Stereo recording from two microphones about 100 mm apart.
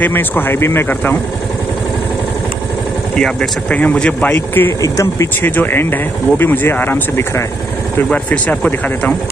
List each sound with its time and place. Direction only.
0.0 s speech: 20° left (ahead or behind)
3.2 s speech: 10° left (ahead or behind)
4.8 s speech: 35° left (ahead or behind)
5.4 s speech: 20° left (ahead or behind)